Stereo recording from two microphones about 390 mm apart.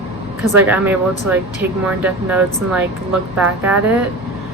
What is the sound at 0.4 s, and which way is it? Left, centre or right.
Speech, centre.